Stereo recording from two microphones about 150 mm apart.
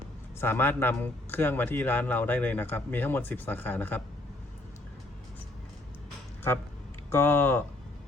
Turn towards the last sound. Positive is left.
turn(degrees=15)  # may be behind; listen again after turning